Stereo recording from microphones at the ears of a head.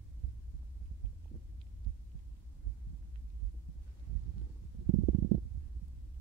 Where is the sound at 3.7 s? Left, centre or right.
Right.